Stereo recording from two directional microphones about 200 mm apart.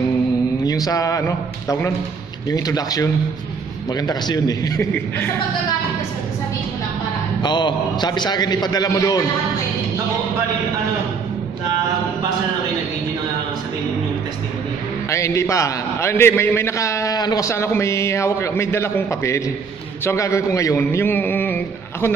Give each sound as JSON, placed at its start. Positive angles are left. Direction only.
{"t": 0.7, "sound": "a man's voice", "side_deg": 20}
{"t": 7.4, "sound": "a man's voice", "side_deg": 20}
{"t": 15.0, "sound": "a man's voice", "side_deg": 15}